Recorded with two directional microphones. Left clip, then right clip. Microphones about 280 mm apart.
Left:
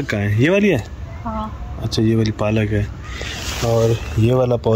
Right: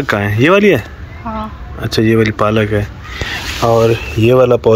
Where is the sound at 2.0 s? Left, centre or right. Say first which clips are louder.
Right 8 dB; centre.